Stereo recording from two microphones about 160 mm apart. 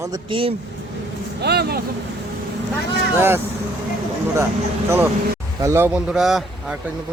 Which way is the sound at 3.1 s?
15° right (ahead or behind).